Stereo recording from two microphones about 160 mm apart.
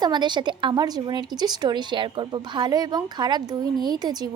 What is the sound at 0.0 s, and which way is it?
A woman's voice, 30° right (ahead or behind).